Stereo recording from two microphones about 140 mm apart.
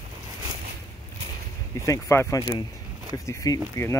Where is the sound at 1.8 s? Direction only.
20° left (ahead or behind).